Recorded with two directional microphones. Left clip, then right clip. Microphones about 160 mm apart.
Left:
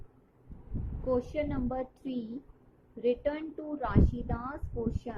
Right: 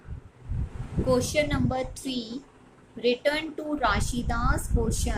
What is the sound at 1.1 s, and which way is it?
A woman's voice, centre (ahead or behind).